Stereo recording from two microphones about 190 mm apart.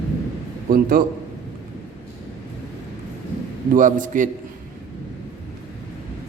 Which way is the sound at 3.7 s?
45° right (ahead or behind).